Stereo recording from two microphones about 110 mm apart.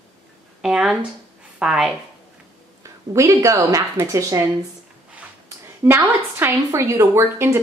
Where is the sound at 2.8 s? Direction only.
30° right (ahead or behind).